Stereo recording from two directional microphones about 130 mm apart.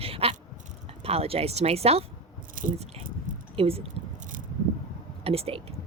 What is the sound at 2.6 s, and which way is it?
Speech, 90° right.